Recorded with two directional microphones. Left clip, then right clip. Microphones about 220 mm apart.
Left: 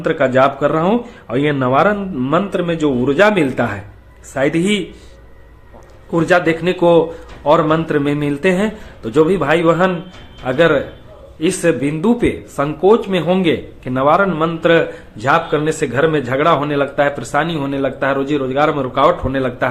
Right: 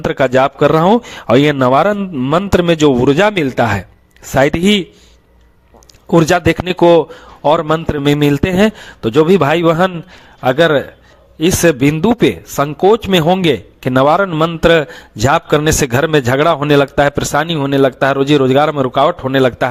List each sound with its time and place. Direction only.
0.0 s speech: 50° right (ahead or behind)
6.1 s speech: 45° right (ahead or behind)